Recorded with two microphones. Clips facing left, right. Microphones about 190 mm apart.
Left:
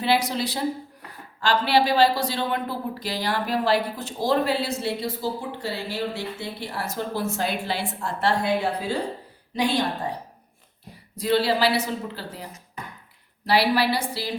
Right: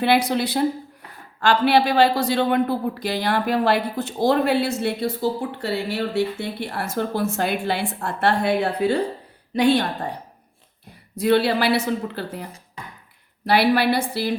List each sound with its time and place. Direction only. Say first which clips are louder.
0.0 s speech: right 4 dB; 60° right (ahead or behind)
11.2 s speech: right 3 dB; 60° right (ahead or behind)
13.5 s speech: right 3 dB; 55° right (ahead or behind)